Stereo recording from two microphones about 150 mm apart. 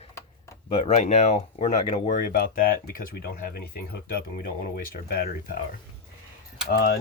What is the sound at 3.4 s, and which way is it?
Speech, 85° left.